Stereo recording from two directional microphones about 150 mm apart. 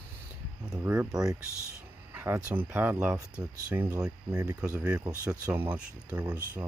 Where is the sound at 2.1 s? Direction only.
15° right (ahead or behind).